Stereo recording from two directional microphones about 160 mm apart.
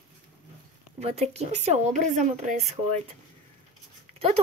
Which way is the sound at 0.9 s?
40° right (ahead or behind).